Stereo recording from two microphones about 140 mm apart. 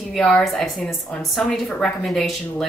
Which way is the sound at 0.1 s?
5° left (ahead or behind).